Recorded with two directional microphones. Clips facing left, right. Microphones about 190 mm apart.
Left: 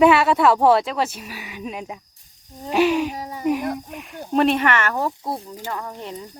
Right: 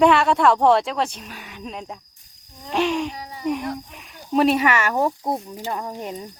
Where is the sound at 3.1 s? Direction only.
45° left (ahead or behind).